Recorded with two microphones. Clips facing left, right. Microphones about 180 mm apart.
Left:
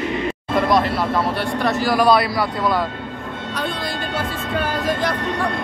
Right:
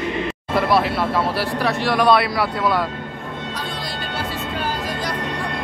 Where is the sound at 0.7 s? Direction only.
Centre (ahead or behind).